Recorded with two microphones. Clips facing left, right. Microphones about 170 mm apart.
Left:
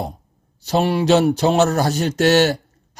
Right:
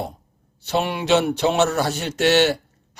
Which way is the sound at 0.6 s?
35° left (ahead or behind).